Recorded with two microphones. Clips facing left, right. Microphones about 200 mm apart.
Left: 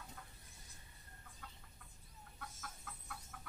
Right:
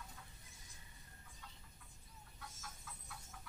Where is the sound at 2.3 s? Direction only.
55° left (ahead or behind).